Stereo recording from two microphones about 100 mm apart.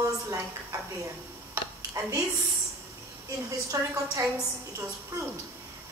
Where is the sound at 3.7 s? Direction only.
30° right (ahead or behind).